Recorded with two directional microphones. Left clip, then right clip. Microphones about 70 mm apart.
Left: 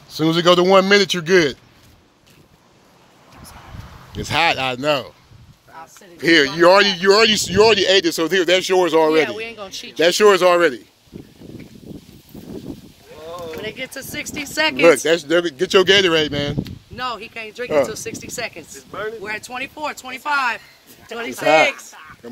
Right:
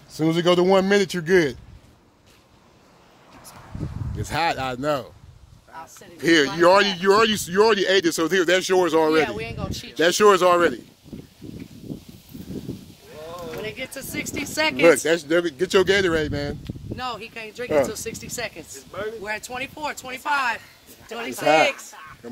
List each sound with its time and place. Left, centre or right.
0.1 s speech: right
4.2 s speech: centre
6.2 s speech: centre
6.5 s speech: centre; by 8.0 s right
8.0 s speech: right
9.1 s speech: centre
9.9 s speech: right
13.9 s speech: left
15.2 s speech: centre
17.2 s speech: centre
18.0 s speech: centre